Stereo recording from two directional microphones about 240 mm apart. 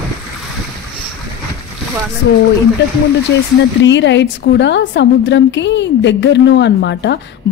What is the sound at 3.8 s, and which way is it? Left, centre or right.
A woman's voice, left.